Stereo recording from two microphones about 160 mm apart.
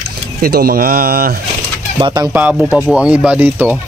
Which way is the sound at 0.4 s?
75° right (ahead or behind).